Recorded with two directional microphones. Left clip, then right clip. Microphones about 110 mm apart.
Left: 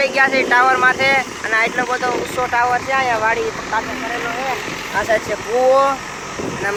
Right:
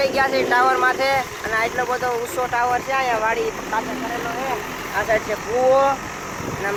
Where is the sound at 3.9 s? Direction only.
65° right (ahead or behind).